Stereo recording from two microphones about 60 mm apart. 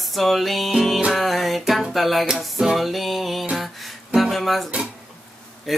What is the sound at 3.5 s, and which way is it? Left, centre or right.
Music, centre.